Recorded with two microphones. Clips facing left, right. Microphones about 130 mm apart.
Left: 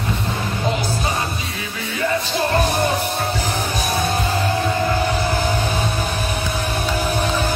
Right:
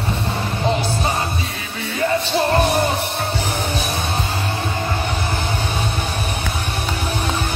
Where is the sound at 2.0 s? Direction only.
30° right (ahead or behind).